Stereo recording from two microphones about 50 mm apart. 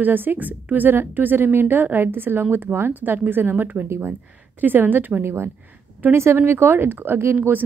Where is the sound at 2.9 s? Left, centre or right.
Right.